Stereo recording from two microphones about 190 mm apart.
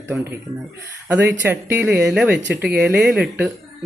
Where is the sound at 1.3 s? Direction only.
10° right (ahead or behind).